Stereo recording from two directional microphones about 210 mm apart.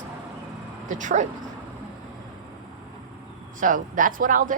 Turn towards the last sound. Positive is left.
turn(degrees=-40)  # may be behind; listen again after turning